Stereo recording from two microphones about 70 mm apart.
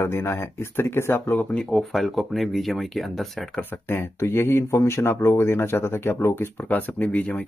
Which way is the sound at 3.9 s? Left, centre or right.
Left.